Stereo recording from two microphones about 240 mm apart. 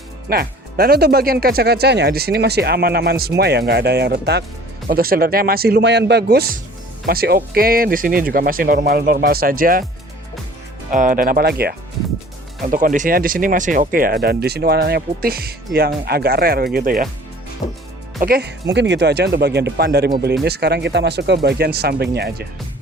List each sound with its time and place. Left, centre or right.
0.3 s speech: right
10.9 s speech: right
17.6 s music: left
18.2 s speech: right